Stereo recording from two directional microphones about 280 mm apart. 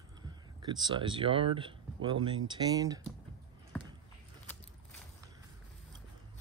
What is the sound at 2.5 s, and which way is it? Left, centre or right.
Speech, centre.